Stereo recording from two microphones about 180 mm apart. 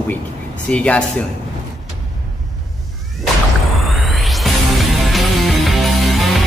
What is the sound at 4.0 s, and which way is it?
Music, centre (ahead or behind).